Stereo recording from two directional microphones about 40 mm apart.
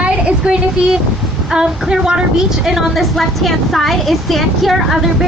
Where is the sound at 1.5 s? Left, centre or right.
Centre.